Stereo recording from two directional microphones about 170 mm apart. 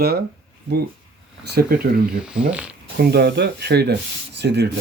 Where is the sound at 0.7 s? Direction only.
80° right.